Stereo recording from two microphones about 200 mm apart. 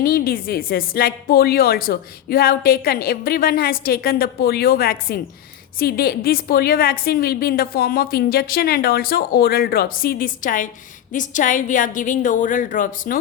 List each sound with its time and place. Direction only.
0.0 s a woman's voice: 45° left (ahead or behind)